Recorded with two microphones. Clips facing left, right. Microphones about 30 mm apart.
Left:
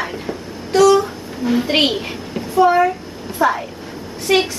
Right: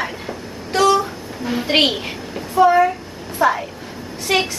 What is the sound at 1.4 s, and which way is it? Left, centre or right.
Speech, centre.